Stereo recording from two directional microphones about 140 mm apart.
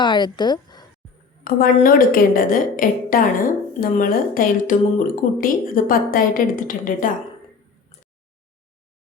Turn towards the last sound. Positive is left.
turn(degrees=75)  # may be behind; listen again after turning